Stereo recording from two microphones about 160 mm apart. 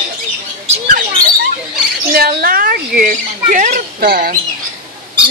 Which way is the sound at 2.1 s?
70° right (ahead or behind).